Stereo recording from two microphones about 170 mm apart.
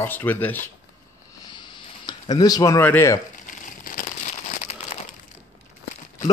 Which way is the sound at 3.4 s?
55° left (ahead or behind).